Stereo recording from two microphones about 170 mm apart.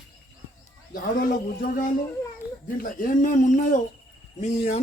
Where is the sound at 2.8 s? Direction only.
55° left (ahead or behind).